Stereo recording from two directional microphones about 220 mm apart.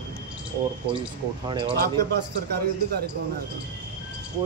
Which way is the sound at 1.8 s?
45° right (ahead or behind).